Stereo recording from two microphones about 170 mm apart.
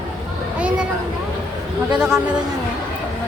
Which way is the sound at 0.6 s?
5° right (ahead or behind).